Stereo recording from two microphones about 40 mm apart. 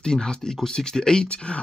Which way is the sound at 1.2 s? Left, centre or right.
Left.